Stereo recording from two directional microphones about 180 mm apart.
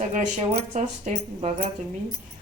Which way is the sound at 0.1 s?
40° right (ahead or behind).